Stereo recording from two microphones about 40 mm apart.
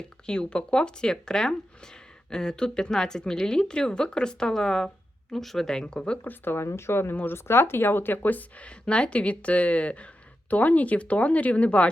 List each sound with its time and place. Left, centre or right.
0.0 s speech: left
6.2 s speech: left
8.5 s speech: left